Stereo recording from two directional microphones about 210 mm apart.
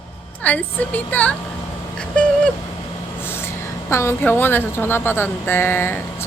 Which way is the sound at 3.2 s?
10° left (ahead or behind).